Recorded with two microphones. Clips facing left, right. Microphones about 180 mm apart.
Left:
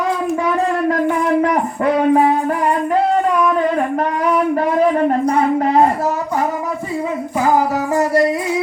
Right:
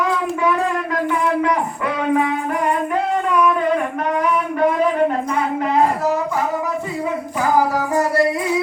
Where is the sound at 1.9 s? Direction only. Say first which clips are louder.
Left 5 dB; 35° left (ahead or behind).